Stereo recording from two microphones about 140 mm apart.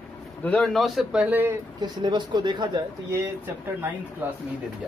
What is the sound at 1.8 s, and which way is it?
Speech, 30° right (ahead or behind).